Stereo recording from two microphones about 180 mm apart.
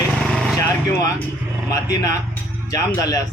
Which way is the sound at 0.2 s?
Centre (ahead or behind).